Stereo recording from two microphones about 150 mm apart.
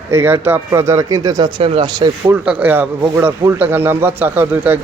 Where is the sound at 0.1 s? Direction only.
15° right (ahead or behind); by 2.0 s 35° right (ahead or behind).